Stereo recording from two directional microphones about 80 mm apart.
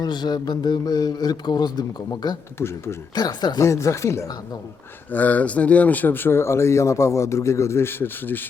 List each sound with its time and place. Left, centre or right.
0.0 s speech: left
2.6 s speech: left
3.2 s speech: left
3.6 s speech: left
5.1 s speech: centre